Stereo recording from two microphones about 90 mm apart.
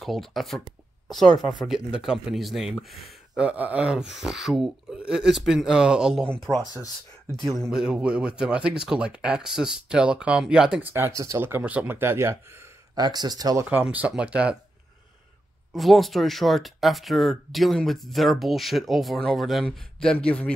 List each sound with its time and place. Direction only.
0.0 s speech: centre (ahead or behind)
1.0 s a sound: 5° left (ahead or behind)
1.6 s speech: 5° right (ahead or behind)
3.3 s speech: 15° right (ahead or behind)
6.2 s speech: 10° left (ahead or behind)
6.5 s speech: 45° right (ahead or behind)
7.7 s speech: 5° right (ahead or behind)
10.8 s speech: 25° right (ahead or behind)
11.4 s speech: 20° right (ahead or behind)
12.9 s speech: 50° right (ahead or behind)
13.8 s speech: 10° right (ahead or behind)
15.7 s speech: centre (ahead or behind)